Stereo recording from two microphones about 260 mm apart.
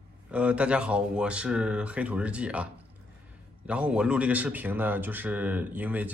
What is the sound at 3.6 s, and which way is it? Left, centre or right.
Speech, centre.